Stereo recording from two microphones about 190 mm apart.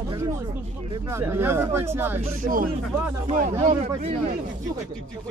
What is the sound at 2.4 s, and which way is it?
Speech, 45° right (ahead or behind).